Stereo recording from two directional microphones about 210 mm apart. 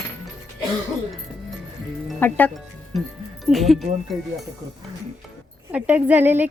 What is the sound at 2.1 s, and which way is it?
Speech, 10° left (ahead or behind).